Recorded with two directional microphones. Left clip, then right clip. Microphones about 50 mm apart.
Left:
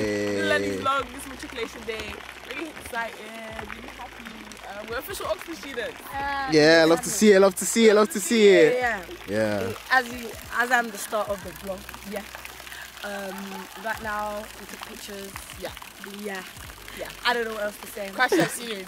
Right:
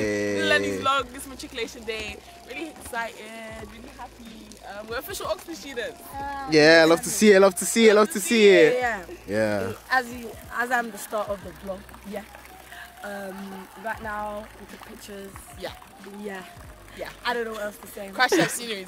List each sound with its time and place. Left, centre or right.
0.0 s music: centre
1.5 s speech: centre
4.6 s speech: centre
6.1 s speech: left
6.5 s speech: centre; by 14.4 s left
17.0 s speech: centre
18.1 s speech: centre